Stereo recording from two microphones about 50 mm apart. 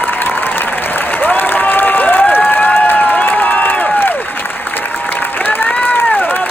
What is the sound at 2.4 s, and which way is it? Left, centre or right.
Crowd, left.